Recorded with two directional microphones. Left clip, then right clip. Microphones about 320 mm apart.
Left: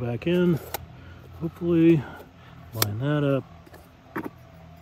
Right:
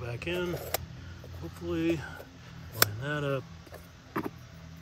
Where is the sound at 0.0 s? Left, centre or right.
Left.